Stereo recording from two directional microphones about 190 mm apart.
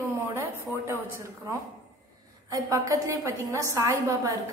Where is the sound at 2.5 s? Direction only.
15° right (ahead or behind).